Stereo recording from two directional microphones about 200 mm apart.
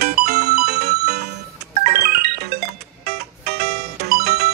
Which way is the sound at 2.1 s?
50° right (ahead or behind).